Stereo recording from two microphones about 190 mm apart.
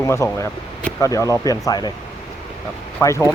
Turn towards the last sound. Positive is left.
turn(degrees=15)  # may be behind; listen again after turning